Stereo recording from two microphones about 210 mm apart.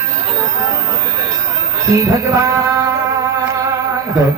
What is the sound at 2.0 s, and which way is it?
Music, 15° right (ahead or behind).